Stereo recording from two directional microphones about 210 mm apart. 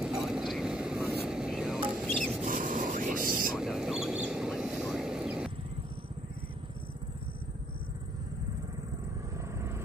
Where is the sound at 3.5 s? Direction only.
Centre (ahead or behind).